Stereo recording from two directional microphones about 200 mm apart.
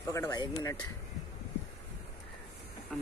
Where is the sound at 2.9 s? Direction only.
Centre (ahead or behind).